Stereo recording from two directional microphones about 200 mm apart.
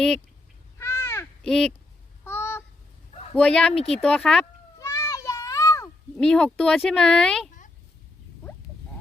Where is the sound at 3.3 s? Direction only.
5° left (ahead or behind).